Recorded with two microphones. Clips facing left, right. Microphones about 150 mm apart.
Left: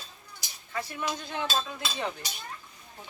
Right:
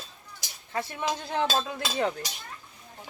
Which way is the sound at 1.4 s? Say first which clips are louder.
Right 3 dB; 90° right.